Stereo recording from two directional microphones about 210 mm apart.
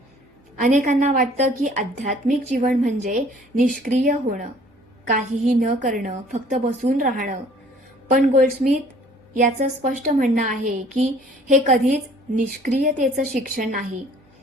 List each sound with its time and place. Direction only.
0.6 s a woman's voice: 35° right (ahead or behind)